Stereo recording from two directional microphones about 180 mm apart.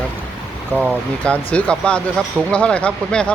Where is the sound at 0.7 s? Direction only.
10° left (ahead or behind).